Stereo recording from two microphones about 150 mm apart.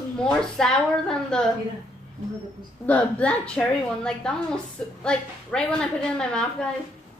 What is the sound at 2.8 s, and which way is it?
A woman's voice, 10° left (ahead or behind).